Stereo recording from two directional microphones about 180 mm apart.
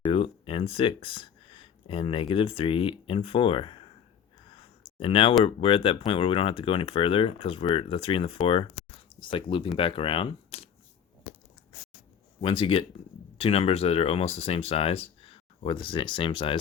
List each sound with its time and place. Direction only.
0.1 s speech: 30° left (ahead or behind)
4.9 s speech: 30° left (ahead or behind)
12.4 s speech: 30° left (ahead or behind)